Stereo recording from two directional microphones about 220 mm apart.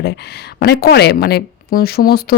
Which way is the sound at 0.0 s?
50° left (ahead or behind).